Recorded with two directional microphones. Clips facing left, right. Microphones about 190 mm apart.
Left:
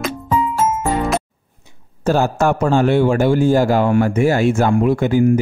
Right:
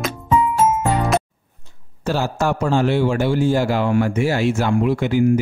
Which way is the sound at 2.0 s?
50° left (ahead or behind).